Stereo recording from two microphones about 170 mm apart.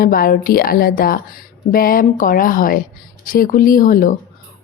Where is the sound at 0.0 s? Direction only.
60° left (ahead or behind).